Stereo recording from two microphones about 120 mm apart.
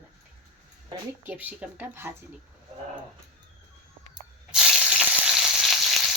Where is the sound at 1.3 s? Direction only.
15° right (ahead or behind).